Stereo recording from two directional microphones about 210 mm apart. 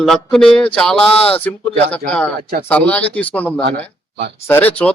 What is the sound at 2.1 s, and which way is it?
Speech, 5° left (ahead or behind).